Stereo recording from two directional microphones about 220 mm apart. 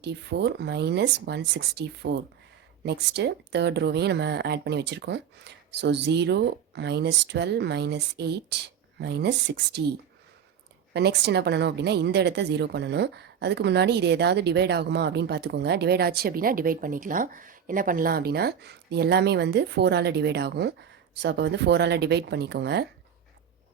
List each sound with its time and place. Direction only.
0.0 s a woman's voice: 50° right (ahead or behind)
10.9 s a woman's voice: 50° right (ahead or behind)